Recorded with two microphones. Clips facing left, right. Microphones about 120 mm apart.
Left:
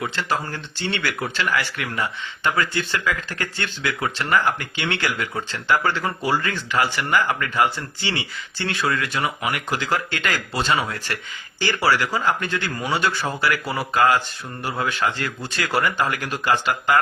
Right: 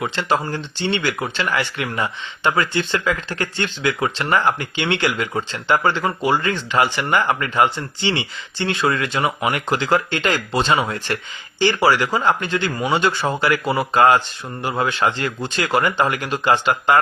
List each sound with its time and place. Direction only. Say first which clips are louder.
0.0 s speech: right 4 dB; 20° right (ahead or behind)